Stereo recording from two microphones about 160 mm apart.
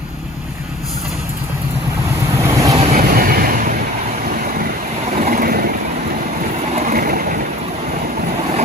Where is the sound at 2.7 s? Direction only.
40° right (ahead or behind).